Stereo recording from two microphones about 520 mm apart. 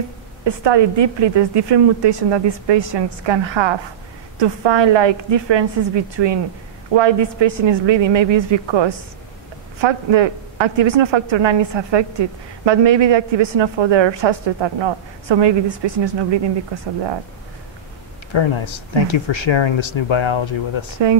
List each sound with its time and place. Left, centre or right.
0.5 s a woman's voice: right
18.3 s speech: left